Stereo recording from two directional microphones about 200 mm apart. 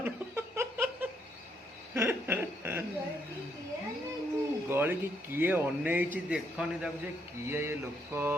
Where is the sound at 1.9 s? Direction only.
10° right (ahead or behind).